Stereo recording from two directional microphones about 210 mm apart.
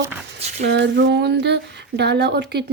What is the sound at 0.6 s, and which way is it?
Speech, 55° right (ahead or behind).